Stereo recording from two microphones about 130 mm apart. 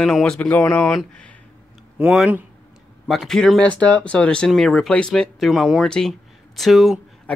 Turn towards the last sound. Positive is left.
turn(degrees=0)  # may be behind; listen again after turning